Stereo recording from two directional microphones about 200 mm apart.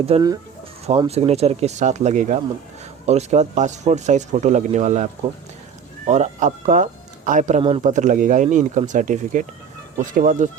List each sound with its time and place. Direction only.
0.1 s speech: 30° right (ahead or behind)
6.1 s speech: 35° right (ahead or behind)